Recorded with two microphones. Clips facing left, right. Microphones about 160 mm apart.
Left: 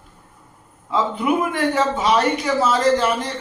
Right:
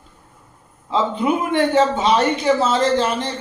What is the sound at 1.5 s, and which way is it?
A man's voice, 25° right (ahead or behind).